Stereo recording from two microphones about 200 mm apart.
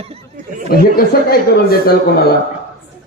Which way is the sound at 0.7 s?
50° left (ahead or behind).